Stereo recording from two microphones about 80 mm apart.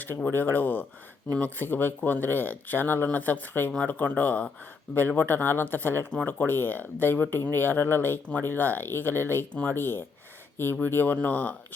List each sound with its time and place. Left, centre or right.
0.3 s speech: left